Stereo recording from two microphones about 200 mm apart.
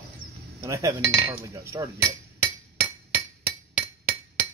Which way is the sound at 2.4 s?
10° right (ahead or behind).